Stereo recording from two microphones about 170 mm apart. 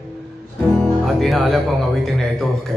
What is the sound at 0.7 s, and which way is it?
A man's voice, 5° left (ahead or behind).